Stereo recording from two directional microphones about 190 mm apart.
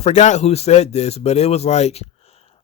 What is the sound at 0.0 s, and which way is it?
Speech, 40° left (ahead or behind).